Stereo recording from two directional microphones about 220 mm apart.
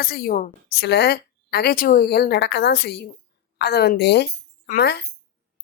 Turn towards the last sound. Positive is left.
turn(degrees=45)  # may be behind; listen again after turning